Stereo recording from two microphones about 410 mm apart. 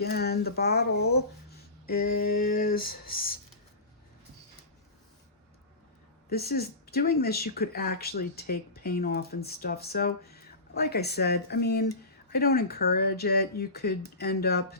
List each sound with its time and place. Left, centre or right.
0.0 s speech: left
6.3 s speech: left